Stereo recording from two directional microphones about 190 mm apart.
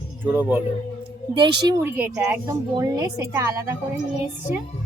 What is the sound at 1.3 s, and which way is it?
A woman's voice, 25° right (ahead or behind).